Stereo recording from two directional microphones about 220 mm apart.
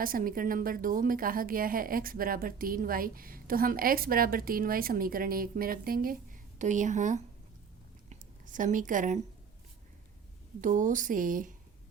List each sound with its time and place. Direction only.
0.0 s a woman's voice: 40° right (ahead or behind)
10.6 s a woman's voice: 35° right (ahead or behind)